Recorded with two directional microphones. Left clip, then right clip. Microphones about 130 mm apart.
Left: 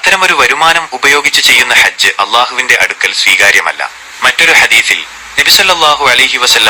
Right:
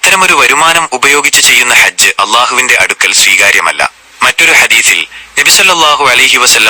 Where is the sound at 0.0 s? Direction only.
15° right (ahead or behind).